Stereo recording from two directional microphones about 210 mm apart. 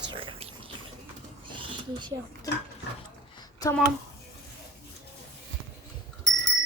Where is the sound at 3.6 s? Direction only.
15° left (ahead or behind).